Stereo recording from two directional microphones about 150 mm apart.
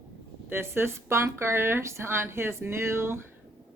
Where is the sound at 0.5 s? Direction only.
15° right (ahead or behind).